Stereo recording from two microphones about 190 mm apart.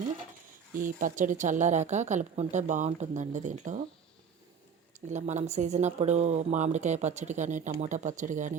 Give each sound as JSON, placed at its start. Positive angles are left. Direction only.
{"t": 0.8, "sound": "speech", "side_deg": -45}
{"t": 5.0, "sound": "speech", "side_deg": -40}